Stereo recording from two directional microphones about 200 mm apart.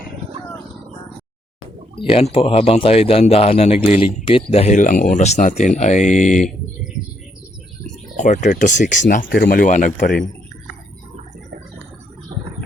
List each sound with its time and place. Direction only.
2.0 s speech: 30° left (ahead or behind)
8.1 s speech: 35° left (ahead or behind)